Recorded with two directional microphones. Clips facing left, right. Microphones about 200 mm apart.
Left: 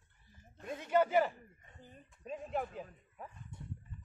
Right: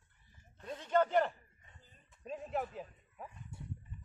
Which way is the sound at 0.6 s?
10° left (ahead or behind).